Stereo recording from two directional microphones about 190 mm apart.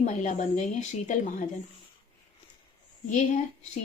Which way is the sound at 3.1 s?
35° left (ahead or behind).